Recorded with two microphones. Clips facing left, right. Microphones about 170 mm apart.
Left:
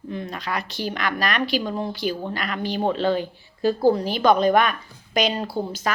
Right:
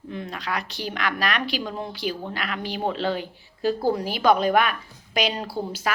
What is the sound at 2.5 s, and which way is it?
A woman's voice, 5° right (ahead or behind).